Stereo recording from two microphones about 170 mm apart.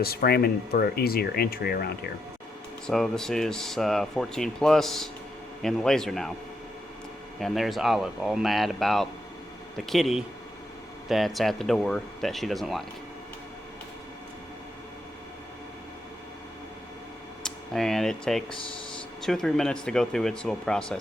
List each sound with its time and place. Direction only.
0.0 s speech: 65° left (ahead or behind)
2.8 s speech: centre (ahead or behind)
7.3 s speech: centre (ahead or behind)
17.4 s speech: centre (ahead or behind)